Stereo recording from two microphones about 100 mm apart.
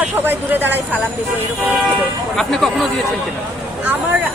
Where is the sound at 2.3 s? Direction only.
5° left (ahead or behind).